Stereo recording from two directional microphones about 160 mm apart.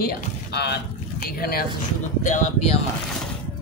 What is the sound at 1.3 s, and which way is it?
Speech, 70° left (ahead or behind).